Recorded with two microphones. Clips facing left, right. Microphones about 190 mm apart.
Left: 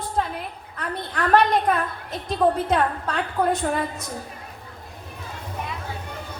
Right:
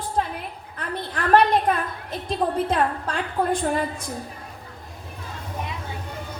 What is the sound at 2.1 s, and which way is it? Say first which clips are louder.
A woman's voice: left 4 dB; 30° right (ahead or behind).